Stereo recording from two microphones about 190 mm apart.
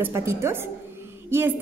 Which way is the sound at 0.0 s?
15° right (ahead or behind).